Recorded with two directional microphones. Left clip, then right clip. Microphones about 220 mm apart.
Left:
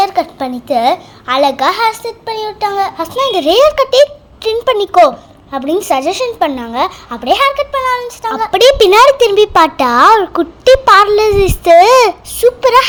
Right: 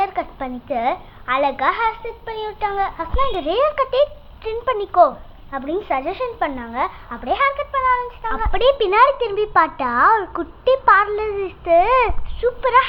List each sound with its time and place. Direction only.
0.0 s a child's voice: 40° left (ahead or behind)
8.5 s speech: 60° left (ahead or behind)